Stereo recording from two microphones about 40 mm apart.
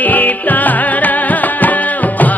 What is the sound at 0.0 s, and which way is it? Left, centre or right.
Music, left.